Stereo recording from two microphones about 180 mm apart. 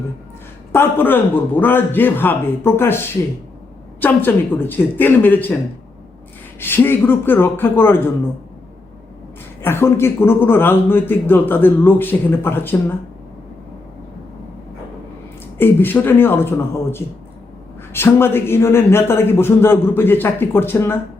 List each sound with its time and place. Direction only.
0.7 s a man's voice: 10° left (ahead or behind)
4.0 s a man's voice: 10° left (ahead or behind)
6.6 s a man's voice: 10° left (ahead or behind)
9.6 s a man's voice: 15° left (ahead or behind)
15.5 s a man's voice: 10° left (ahead or behind)